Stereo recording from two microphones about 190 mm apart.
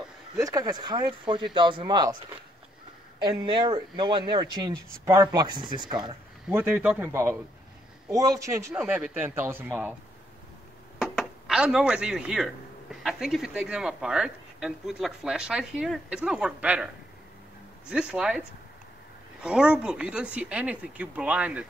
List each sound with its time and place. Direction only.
0.4 s speech: 20° right (ahead or behind)
3.2 s speech: 25° right (ahead or behind)
6.5 s speech: 10° right (ahead or behind)
11.0 s a sound: centre (ahead or behind)
12.9 s speech: centre (ahead or behind)
19.4 s speech: 5° right (ahead or behind)